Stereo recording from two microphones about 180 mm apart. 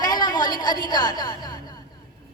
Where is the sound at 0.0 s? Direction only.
20° left (ahead or behind).